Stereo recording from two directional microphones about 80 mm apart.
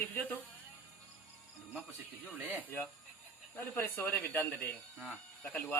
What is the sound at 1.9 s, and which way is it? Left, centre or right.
Speech, left.